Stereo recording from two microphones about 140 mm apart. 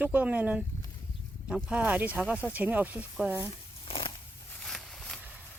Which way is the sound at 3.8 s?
40° left (ahead or behind).